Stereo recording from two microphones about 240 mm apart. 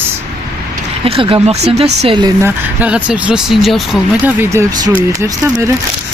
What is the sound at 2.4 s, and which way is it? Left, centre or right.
Speech, centre.